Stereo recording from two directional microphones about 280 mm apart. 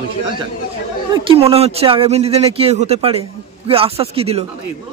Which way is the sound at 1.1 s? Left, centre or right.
Centre.